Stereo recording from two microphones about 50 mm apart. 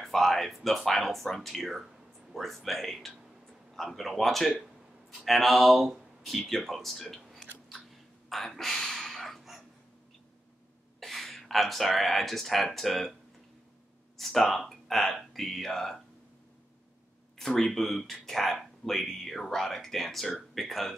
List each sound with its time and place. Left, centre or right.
0.0 s speech: centre
8.3 s a sound: centre
11.0 s speech: centre
14.1 s speech: centre
17.4 s speech: centre